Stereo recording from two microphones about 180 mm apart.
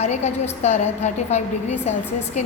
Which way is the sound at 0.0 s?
40° left (ahead or behind).